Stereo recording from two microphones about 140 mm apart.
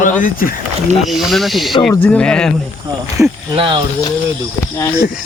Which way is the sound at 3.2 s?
20° right (ahead or behind).